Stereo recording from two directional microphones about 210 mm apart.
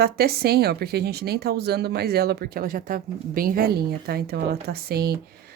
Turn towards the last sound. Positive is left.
turn(degrees=-50)  # may be behind; listen again after turning